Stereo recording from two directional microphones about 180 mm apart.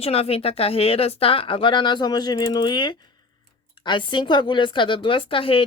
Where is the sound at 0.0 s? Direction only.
35° left (ahead or behind).